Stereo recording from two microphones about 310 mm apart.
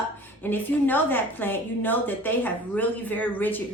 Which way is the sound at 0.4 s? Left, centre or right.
Centre.